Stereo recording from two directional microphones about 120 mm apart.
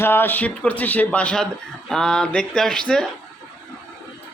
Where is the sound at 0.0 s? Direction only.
20° left (ahead or behind).